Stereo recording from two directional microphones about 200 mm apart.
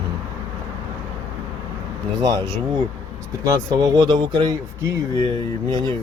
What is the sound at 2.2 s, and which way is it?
Speech, 20° right (ahead or behind).